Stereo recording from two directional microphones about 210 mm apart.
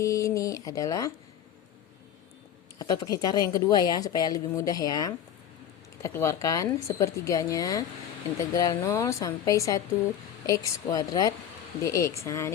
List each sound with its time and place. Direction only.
0.0 s a woman's voice: 15° left (ahead or behind)
2.7 s a woman's voice: 20° left (ahead or behind)